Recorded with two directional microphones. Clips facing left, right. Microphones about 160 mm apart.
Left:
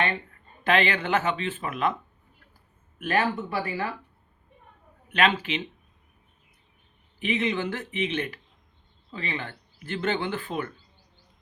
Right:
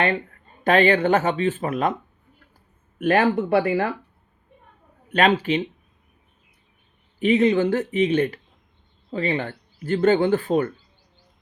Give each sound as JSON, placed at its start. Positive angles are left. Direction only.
{"t": 0.6, "sound": "speech", "side_deg": -40}
{"t": 3.0, "sound": "speech", "side_deg": -55}
{"t": 5.1, "sound": "speech", "side_deg": -40}
{"t": 7.3, "sound": "speech", "side_deg": -40}